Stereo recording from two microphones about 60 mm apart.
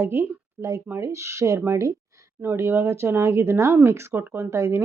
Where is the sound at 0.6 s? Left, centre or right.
Right.